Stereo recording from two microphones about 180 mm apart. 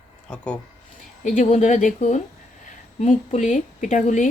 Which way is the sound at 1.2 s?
45° left (ahead or behind).